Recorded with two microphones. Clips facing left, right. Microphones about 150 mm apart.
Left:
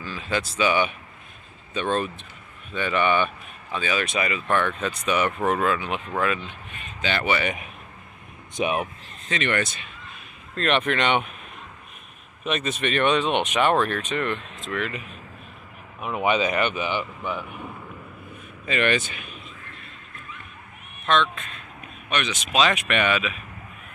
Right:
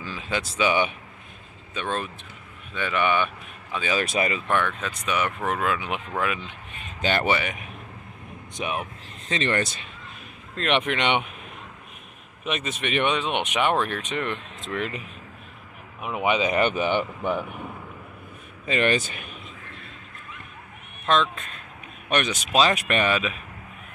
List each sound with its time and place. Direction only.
0.0 s speech: 15° right (ahead or behind)
1.7 s speech: centre (ahead or behind)
4.0 s speech: 35° right (ahead or behind)
4.6 s speech: centre (ahead or behind)
7.0 s speech: 45° right (ahead or behind)
8.5 s speech: 10° left (ahead or behind)
9.3 s speech: 30° right (ahead or behind)
10.5 s speech: 10° right (ahead or behind)
12.4 s speech: 10° right (ahead or behind); by 15.0 s 25° right (ahead or behind)
16.0 s speech: 15° right (ahead or behind)
16.5 s speech: 40° right (ahead or behind)
18.7 s speech: 30° right (ahead or behind)
21.0 s speech: 35° right (ahead or behind)